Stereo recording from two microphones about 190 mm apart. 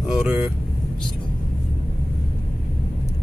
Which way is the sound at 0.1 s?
5° right (ahead or behind).